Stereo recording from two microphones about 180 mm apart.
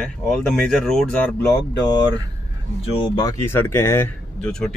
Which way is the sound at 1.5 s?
20° left (ahead or behind).